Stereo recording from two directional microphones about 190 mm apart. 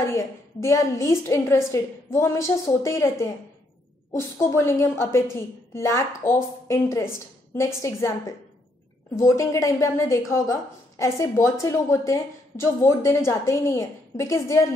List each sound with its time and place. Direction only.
0.1 s a woman's voice: 15° left (ahead or behind)
4.4 s a woman's voice: 15° left (ahead or behind)
9.1 s a woman's voice: 15° left (ahead or behind)